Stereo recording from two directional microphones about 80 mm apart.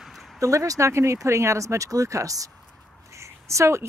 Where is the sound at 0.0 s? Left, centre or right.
Centre.